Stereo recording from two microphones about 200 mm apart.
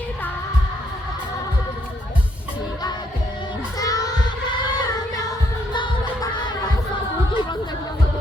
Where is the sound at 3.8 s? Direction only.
20° left (ahead or behind).